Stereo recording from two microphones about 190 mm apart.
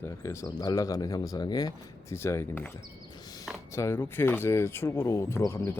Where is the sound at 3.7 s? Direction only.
15° left (ahead or behind).